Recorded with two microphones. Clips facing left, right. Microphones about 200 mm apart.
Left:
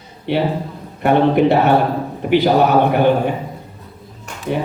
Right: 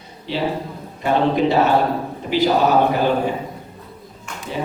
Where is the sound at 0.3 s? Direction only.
60° left (ahead or behind).